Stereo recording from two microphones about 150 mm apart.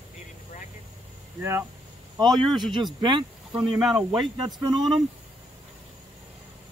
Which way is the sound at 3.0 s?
30° right (ahead or behind).